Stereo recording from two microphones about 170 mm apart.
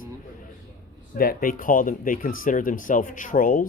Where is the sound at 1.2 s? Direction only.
60° left (ahead or behind).